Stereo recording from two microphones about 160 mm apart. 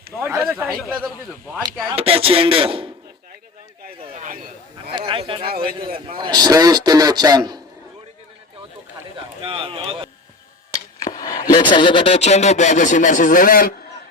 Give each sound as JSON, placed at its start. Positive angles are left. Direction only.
{"t": 0.2, "sound": "speech", "side_deg": -15}
{"t": 1.9, "sound": "a man's voice", "side_deg": -35}
{"t": 4.1, "sound": "a sound", "side_deg": -55}
{"t": 4.9, "sound": "a sound", "side_deg": -35}
{"t": 5.5, "sound": "a man's voice", "side_deg": -70}
{"t": 6.1, "sound": "a man's voice", "side_deg": -30}
{"t": 9.4, "sound": "speech", "side_deg": -35}
{"t": 11.0, "sound": "chopping", "side_deg": 25}
{"t": 11.5, "sound": "speech", "side_deg": 30}